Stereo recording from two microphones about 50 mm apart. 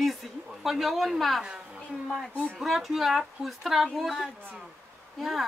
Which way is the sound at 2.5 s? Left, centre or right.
Centre.